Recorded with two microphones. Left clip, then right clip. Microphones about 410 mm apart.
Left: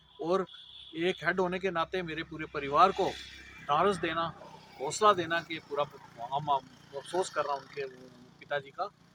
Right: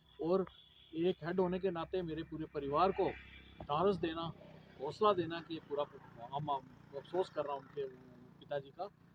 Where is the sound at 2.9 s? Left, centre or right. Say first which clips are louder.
Left 5 dB; right.